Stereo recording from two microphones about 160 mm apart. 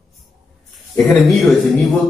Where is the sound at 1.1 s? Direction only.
Centre (ahead or behind).